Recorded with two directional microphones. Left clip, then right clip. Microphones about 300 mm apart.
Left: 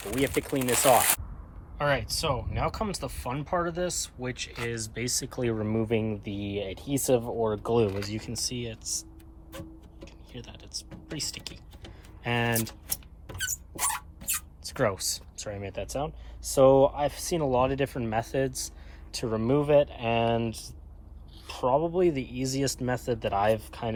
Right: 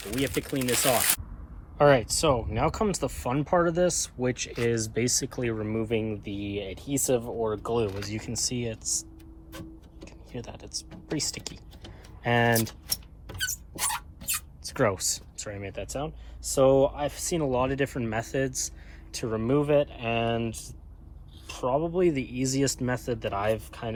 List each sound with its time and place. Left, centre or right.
0.0 s speech: left
1.8 s speech: centre
9.5 s music: centre
10.9 s speech: centre
12.2 s vehicle: centre
14.7 s speech: centre
21.6 s speech: centre